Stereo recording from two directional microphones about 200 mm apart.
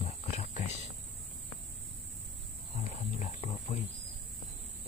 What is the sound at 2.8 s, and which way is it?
Wild animals, 40° left (ahead or behind).